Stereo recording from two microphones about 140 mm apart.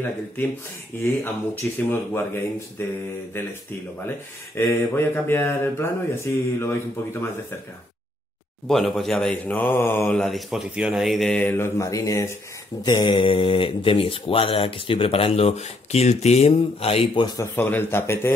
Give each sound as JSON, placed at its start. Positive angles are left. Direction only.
{"t": 0.9, "sound": "speech", "side_deg": 15}
{"t": 4.6, "sound": "speech", "side_deg": 20}
{"t": 8.6, "sound": "speech", "side_deg": 0}
{"t": 12.8, "sound": "speech", "side_deg": 35}
{"t": 17.4, "sound": "speech", "side_deg": 15}